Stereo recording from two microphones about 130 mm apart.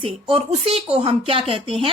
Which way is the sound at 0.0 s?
45° right (ahead or behind).